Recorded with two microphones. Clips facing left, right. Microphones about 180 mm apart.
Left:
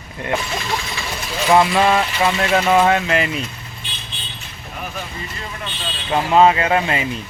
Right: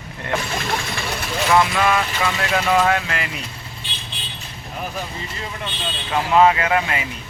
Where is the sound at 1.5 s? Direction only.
30° left (ahead or behind).